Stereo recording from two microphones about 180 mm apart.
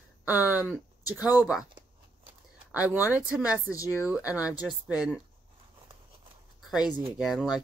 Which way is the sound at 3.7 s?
15° left (ahead or behind).